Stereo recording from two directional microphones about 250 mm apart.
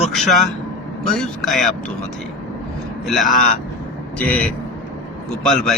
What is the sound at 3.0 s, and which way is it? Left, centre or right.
A man's voice, centre.